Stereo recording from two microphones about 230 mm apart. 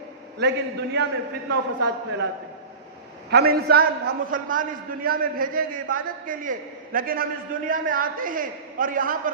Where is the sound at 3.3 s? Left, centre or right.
Right.